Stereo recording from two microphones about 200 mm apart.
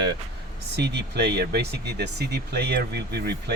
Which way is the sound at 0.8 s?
60° right (ahead or behind).